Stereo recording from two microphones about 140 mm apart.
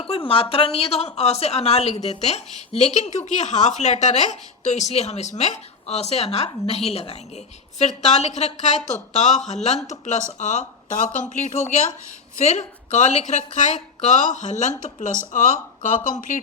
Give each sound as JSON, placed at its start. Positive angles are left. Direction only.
{"t": 0.0, "sound": "a woman's voice", "side_deg": 40}